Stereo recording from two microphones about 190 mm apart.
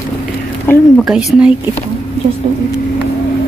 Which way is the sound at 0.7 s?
10° left (ahead or behind).